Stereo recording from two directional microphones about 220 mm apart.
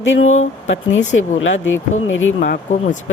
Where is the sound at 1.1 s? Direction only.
60° left (ahead or behind).